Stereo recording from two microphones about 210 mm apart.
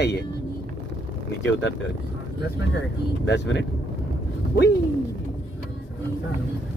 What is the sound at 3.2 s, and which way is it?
Speech, 55° left (ahead or behind).